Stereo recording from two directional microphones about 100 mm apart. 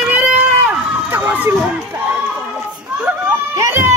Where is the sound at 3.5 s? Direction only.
25° right (ahead or behind).